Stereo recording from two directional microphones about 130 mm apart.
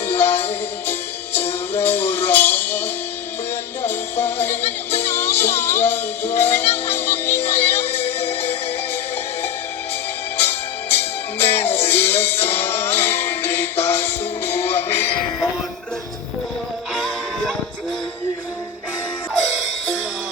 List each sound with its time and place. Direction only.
0.1 s music: 15° left (ahead or behind)
10.4 s music: 15° left (ahead or behind)
16.9 s music: centre (ahead or behind)